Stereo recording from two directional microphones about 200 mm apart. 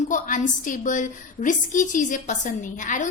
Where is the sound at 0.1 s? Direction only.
40° left (ahead or behind).